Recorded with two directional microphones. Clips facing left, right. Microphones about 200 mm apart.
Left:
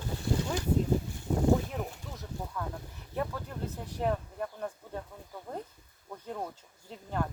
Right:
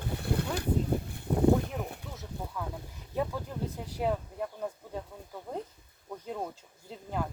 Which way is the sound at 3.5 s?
10° right (ahead or behind).